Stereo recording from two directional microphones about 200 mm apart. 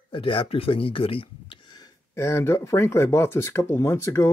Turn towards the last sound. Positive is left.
turn(degrees=15)  # may be behind; listen again after turning